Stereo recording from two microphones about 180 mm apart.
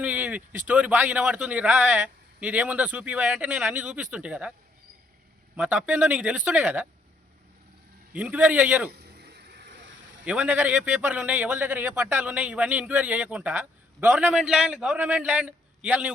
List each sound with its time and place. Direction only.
0.0 s a man's voice: 10° right (ahead or behind)
5.5 s a man's voice: 5° right (ahead or behind)
8.1 s a man's voice: 10° right (ahead or behind)
8.9 s vehicle: 65° right (ahead or behind)
10.2 s a man's voice: 5° right (ahead or behind)